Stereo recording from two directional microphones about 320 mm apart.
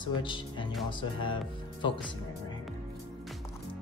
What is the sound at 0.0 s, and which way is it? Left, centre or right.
Speech, centre.